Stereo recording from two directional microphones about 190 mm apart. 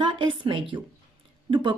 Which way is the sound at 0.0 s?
25° right (ahead or behind).